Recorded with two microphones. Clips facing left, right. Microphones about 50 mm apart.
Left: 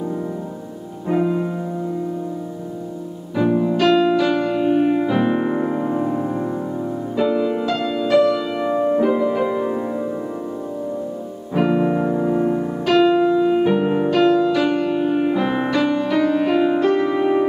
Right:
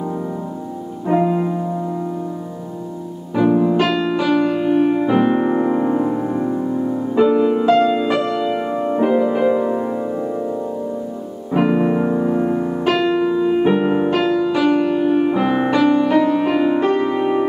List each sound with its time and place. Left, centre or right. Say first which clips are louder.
1.0 s music: right 3 dB; centre
3.3 s music: right 3 dB; centre
3.9 s piano: left 1 dB; centre
5.2 s music: right 3 dB; centre
11.5 s music: right 2 dB; centre
15.9 s music: right 3 dB; centre